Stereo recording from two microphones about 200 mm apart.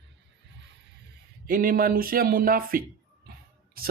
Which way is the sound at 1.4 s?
45° right (ahead or behind).